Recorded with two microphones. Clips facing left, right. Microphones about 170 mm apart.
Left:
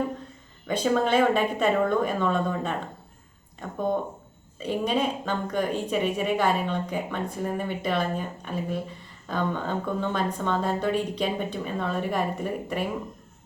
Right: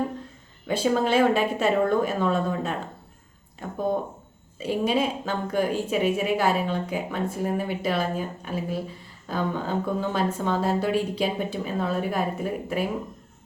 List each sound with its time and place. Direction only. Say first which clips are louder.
0.7 s a woman's voice: right 1 dB; 5° right (ahead or behind)